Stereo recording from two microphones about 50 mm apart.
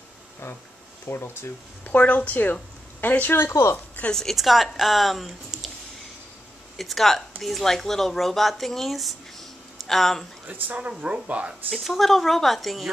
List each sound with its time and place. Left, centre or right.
1.0 s speech: left
1.9 s a woman's voice: left
3.7 s speech: left
4.1 s a woman's voice: centre
4.4 s speech: centre
5.5 s a sound: centre
6.8 s speech: centre
10.4 s speech: right
11.7 s speech: centre